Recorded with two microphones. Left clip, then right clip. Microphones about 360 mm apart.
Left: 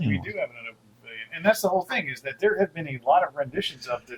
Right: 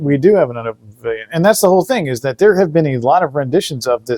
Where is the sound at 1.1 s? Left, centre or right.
Right.